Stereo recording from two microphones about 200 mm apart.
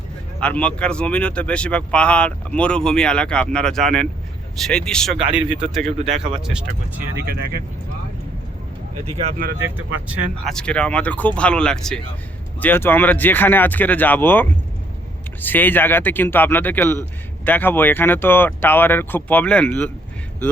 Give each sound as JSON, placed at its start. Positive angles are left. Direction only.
{"t": 0.3, "sound": "speech", "side_deg": 5}
{"t": 7.3, "sound": "speech", "side_deg": -50}
{"t": 9.0, "sound": "speech", "side_deg": -30}
{"t": 9.6, "sound": "speech", "side_deg": -10}
{"t": 10.1, "sound": "speech", "side_deg": 5}